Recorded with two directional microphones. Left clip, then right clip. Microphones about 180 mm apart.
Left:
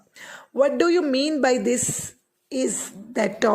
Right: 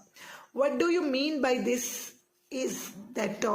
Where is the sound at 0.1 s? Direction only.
45° left (ahead or behind).